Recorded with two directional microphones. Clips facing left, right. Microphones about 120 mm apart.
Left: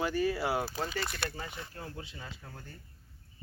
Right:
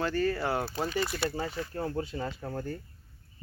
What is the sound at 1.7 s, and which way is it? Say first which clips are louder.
Speech: right 11 dB; 40° right (ahead or behind).